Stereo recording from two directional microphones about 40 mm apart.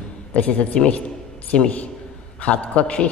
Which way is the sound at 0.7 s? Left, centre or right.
Centre.